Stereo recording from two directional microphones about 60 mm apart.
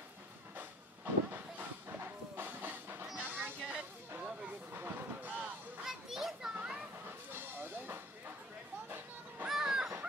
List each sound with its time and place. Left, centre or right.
0.6 s vehicle: right
3.2 s music: right
4.7 s vehicle: right
5.9 s children playing: centre
6.5 s children playing: centre
7.1 s a sound: right
9.5 s a sound: centre